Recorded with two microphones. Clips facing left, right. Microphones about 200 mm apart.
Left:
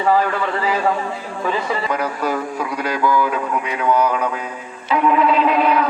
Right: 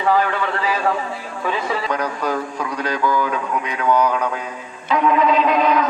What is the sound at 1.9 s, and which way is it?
Speech, 5° left (ahead or behind).